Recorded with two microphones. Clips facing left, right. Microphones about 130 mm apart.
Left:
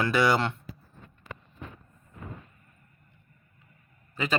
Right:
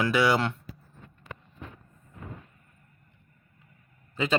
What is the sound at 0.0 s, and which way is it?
Speech, 10° right (ahead or behind).